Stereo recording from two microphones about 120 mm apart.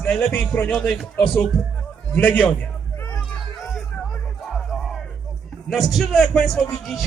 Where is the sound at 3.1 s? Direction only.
20° left (ahead or behind).